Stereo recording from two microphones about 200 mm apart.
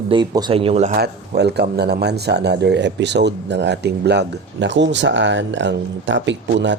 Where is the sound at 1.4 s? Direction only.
55° right (ahead or behind).